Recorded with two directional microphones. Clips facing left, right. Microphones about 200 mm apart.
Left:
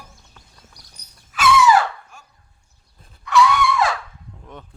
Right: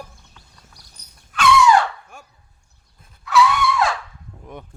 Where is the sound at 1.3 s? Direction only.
5° left (ahead or behind).